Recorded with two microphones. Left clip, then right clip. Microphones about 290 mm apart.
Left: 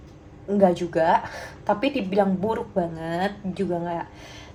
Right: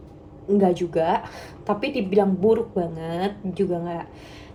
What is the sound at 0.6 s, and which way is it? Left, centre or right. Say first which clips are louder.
A woman's voice: left 3 dB; left.